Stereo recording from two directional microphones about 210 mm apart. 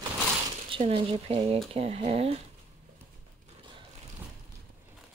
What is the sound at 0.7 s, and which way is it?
Speech, 25° right (ahead or behind).